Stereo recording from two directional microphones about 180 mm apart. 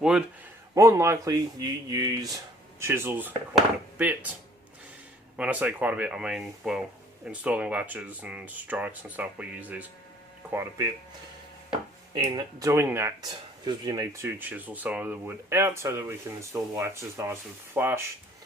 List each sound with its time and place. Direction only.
0.0 s a man's voice: 5° right (ahead or behind)
0.7 s speech: 15° right (ahead or behind)
5.4 s speech: 10° right (ahead or behind)